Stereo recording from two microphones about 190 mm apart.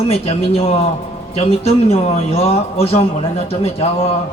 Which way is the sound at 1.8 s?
35° left (ahead or behind).